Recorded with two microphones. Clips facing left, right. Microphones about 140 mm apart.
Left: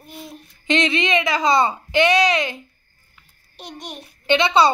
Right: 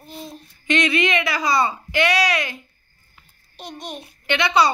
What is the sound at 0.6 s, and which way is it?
Babbling, 20° left (ahead or behind).